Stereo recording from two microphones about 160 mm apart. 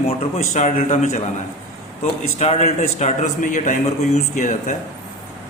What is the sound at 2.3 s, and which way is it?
A man's voice, 45° left (ahead or behind).